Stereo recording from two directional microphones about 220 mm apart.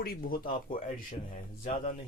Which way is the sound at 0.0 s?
40° left (ahead or behind).